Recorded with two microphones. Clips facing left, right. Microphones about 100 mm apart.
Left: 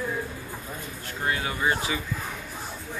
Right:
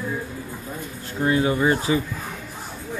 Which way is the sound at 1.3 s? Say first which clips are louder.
Right 7 dB; 30° right (ahead or behind).